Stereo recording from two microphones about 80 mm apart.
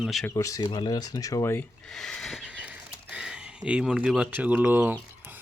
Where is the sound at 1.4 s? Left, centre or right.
Left.